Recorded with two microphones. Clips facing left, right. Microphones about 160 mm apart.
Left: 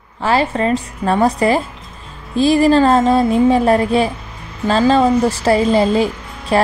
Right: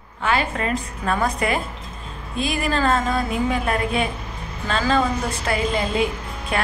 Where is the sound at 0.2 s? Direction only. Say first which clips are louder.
Left 7 dB; 30° left (ahead or behind).